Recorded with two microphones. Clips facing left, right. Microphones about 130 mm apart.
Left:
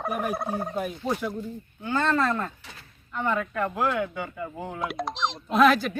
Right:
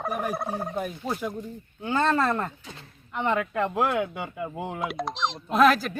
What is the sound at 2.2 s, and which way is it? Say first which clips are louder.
Speech: right 1 dB; 20° right (ahead or behind).